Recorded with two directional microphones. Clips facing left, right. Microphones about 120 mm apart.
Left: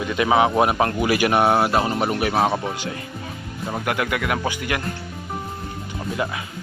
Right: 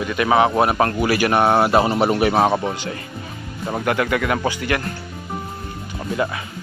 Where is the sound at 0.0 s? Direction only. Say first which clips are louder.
Right 1 dB; 20° left (ahead or behind).